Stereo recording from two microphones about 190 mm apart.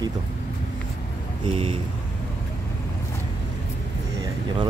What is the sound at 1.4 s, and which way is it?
Speech, 30° right (ahead or behind).